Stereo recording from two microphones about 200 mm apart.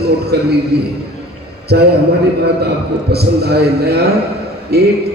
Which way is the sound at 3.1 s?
55° right (ahead or behind).